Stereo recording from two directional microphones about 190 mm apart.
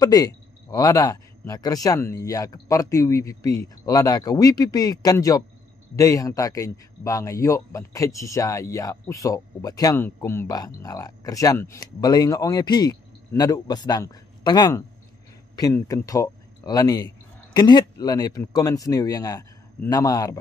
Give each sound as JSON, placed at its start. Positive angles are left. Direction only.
{"t": 0.0, "sound": "speech", "side_deg": 20}